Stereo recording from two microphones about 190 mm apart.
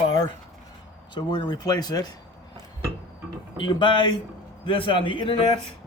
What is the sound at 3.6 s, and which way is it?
Speech, 25° left (ahead or behind).